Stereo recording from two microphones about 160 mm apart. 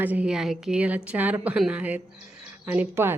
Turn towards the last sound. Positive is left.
turn(degrees=-15)  # may be behind; listen again after turning